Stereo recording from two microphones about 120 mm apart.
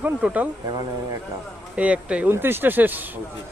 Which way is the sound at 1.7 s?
10° right (ahead or behind).